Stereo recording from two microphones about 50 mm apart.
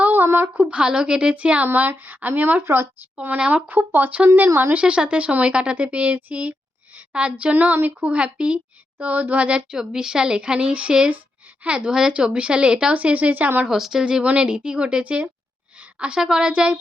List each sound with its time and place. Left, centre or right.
0.1 s a sound: right
0.6 s speech: right
1.6 s speech: right
2.6 s speech: right
3.3 s speech: right
4.4 s speech: right
4.7 s a woman's voice: right
9.6 s a woman's voice: centre; by 13.5 s right
13.7 s a woman's voice: centre
14.0 s a woman's voice: right